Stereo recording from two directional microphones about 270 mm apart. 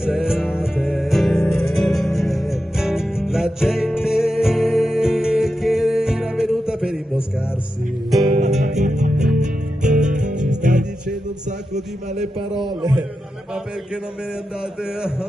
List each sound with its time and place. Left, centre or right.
0.0 s music: centre
8.2 s music: right
11.7 s a sound: right